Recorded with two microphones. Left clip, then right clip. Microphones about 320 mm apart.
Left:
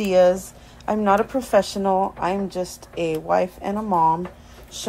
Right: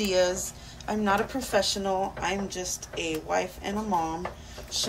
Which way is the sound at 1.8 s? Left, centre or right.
Left.